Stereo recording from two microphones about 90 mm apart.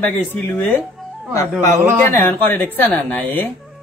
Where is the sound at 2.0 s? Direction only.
25° left (ahead or behind).